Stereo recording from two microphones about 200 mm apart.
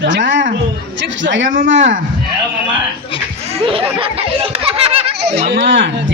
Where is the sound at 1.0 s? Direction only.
65° right (ahead or behind).